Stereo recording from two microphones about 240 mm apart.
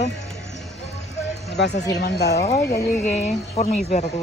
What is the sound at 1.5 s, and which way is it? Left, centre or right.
Speech, left.